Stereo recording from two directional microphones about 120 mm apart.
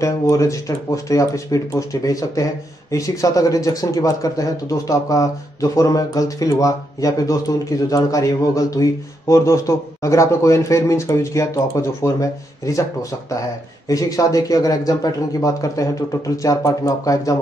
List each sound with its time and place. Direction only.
0.0 s speech: 25° left (ahead or behind)
13.8 s speech: 30° left (ahead or behind)